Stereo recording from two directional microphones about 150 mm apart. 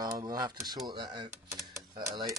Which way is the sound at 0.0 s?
25° right (ahead or behind).